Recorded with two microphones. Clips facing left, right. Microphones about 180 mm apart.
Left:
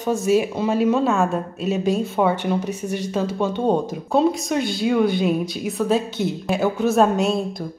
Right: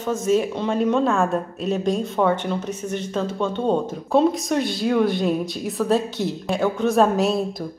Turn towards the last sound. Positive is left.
turn(degrees=0)  # may be behind; listen again after turning